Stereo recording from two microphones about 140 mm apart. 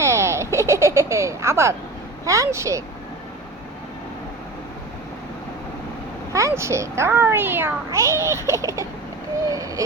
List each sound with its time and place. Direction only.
0.0 s a sound: 20° right (ahead or behind)
2.2 s a child's voice: 25° right (ahead or behind)
6.3 s a child's voice: 20° right (ahead or behind)